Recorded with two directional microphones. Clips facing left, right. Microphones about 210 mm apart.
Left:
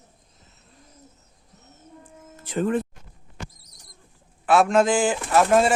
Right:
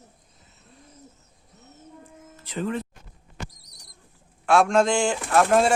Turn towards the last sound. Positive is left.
turn(degrees=5)  # may be behind; listen again after turning